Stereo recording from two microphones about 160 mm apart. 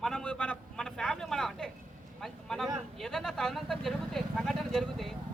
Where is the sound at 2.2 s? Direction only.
Centre (ahead or behind).